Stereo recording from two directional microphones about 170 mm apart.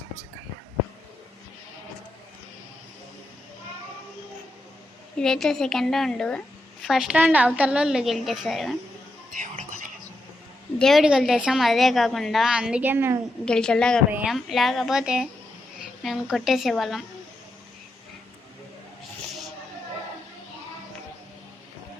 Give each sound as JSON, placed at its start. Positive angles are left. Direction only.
{"t": 5.1, "sound": "a woman's voice", "side_deg": 5}
{"t": 9.3, "sound": "music", "side_deg": -50}
{"t": 10.8, "sound": "a woman's voice", "side_deg": 0}
{"t": 13.4, "sound": "a woman's voice", "side_deg": 5}